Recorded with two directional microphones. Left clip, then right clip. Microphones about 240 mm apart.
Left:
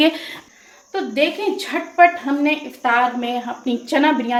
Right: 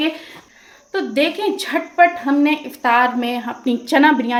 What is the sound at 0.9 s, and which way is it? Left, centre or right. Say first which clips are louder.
A woman's voice: right 1 dB; right.